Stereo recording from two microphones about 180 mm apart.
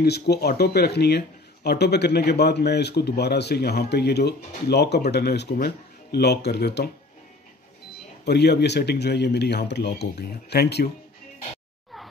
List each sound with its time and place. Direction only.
0.0 s speech: 65° left (ahead or behind)
8.3 s speech: 65° left (ahead or behind)